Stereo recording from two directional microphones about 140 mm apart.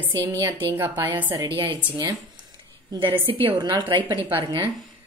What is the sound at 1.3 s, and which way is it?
Speech, 35° right (ahead or behind).